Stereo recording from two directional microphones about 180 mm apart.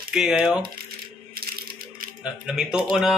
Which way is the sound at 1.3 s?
55° right (ahead or behind).